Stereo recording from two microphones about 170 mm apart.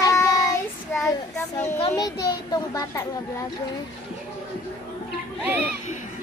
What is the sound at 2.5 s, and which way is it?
Speech, 20° left (ahead or behind).